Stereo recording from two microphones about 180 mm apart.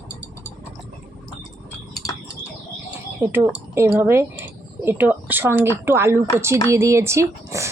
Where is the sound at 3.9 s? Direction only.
15° right (ahead or behind).